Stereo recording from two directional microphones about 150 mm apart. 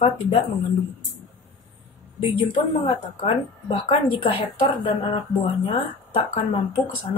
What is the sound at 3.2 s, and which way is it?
Speech, 40° left (ahead or behind).